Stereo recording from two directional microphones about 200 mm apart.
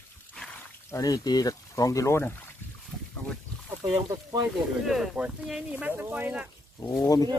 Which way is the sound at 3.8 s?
15° right (ahead or behind).